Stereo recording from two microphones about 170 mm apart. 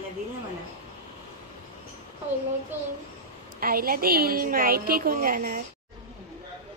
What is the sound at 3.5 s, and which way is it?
A woman's voice, 60° right (ahead or behind).